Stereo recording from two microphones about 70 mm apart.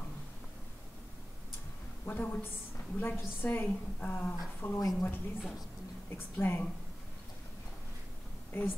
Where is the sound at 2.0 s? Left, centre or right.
Left.